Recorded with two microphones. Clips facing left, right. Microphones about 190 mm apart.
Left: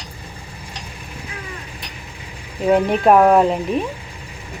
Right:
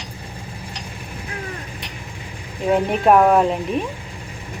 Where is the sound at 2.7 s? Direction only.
Centre (ahead or behind).